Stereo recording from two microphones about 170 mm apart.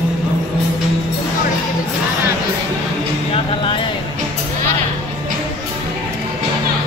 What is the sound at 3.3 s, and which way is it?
Music, 30° left (ahead or behind).